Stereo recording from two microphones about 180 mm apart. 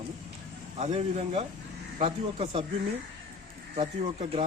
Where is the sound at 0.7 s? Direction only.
35° right (ahead or behind).